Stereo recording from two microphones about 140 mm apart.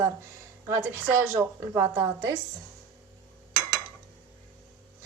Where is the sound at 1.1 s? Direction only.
20° right (ahead or behind).